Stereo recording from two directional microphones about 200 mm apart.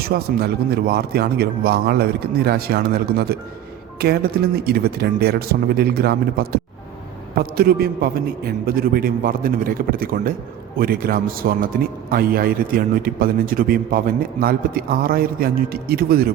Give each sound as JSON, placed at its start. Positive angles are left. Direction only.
{"t": 0.0, "sound": "a man's voice", "side_deg": -50}